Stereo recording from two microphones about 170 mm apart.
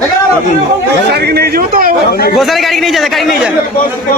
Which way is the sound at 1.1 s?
70° right (ahead or behind).